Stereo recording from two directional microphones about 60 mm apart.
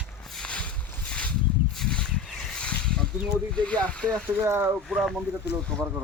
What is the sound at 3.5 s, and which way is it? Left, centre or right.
Speech, centre.